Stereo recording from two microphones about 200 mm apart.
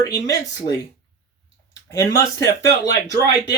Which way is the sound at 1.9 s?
15° left (ahead or behind).